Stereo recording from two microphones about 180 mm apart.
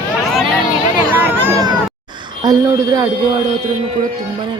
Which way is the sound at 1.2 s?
15° right (ahead or behind).